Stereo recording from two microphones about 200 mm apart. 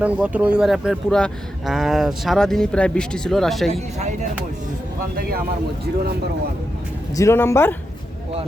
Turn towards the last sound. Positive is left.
turn(degrees=10)  # may be behind; listen again after turning